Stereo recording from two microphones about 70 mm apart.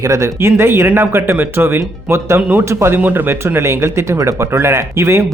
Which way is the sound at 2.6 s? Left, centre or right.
Right.